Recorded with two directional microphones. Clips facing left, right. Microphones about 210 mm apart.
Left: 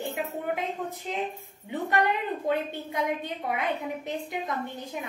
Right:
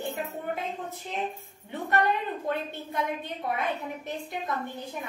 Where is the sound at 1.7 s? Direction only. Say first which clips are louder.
Left 1 dB; 15° left (ahead or behind).